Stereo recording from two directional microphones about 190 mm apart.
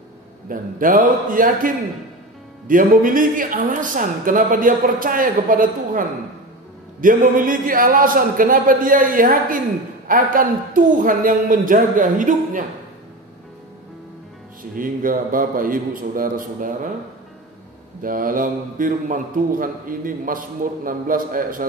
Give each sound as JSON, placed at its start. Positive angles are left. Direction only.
{"t": 0.5, "sound": "a man's voice", "side_deg": -45}
{"t": 2.7, "sound": "a man's voice", "side_deg": -45}
{"t": 14.6, "sound": "a man's voice", "side_deg": -45}
{"t": 18.0, "sound": "a man's voice", "side_deg": -45}